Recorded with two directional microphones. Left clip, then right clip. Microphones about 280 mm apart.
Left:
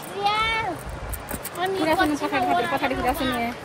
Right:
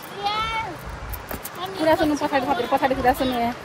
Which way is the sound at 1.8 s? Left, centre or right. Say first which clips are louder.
Right 5 dB; centre.